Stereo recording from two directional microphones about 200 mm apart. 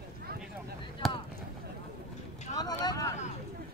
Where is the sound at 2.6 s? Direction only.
20° left (ahead or behind).